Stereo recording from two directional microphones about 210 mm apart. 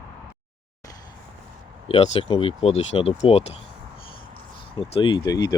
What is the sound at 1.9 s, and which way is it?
Speech, 30° left (ahead or behind).